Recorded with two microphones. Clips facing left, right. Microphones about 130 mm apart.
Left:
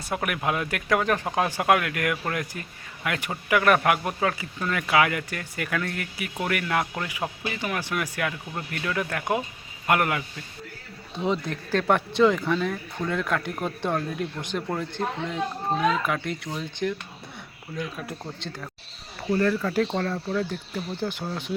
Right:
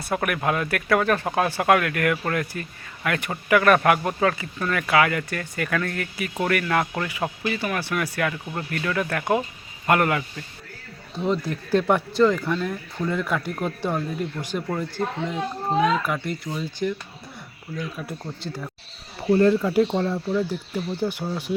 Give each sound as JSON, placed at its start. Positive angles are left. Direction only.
{"t": 0.0, "sound": "speech", "side_deg": 15}
{"t": 11.7, "sound": "speech", "side_deg": -10}
{"t": 15.8, "sound": "speech", "side_deg": 0}
{"t": 19.3, "sound": "speech", "side_deg": -25}